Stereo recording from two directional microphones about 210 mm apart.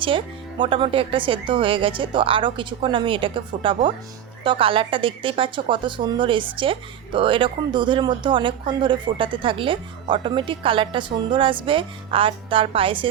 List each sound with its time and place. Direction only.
0.6 s a woman's voice: 25° right (ahead or behind)